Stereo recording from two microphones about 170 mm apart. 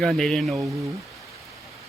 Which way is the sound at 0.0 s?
Centre (ahead or behind).